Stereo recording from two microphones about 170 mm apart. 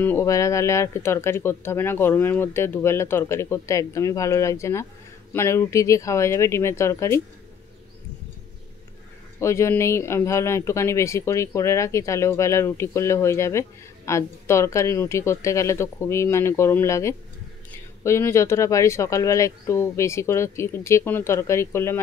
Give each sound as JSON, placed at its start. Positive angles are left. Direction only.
{"t": 0.0, "sound": "speech", "side_deg": 15}
{"t": 9.4, "sound": "speech", "side_deg": 15}